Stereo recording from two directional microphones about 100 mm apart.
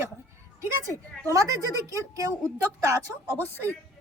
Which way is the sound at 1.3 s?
35° right (ahead or behind).